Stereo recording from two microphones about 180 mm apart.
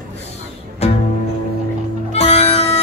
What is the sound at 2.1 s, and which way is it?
Music, 35° left (ahead or behind).